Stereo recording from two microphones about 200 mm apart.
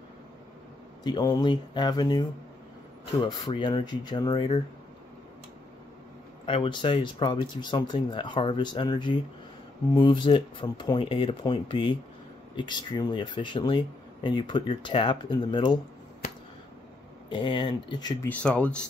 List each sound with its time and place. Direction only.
1.0 s speech: 20° left (ahead or behind)
6.4 s speech: 25° left (ahead or behind)
17.3 s speech: 25° left (ahead or behind)
18.3 s speech: 5° left (ahead or behind)